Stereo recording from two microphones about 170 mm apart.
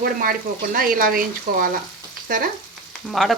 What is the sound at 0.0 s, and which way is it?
Speech, 55° right (ahead or behind).